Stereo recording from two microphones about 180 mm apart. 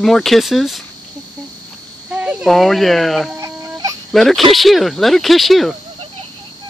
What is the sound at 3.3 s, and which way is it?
Fowl, 15° right (ahead or behind).